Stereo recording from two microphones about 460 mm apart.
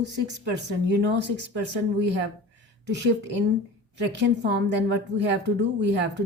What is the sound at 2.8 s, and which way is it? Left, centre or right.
A woman's voice, right.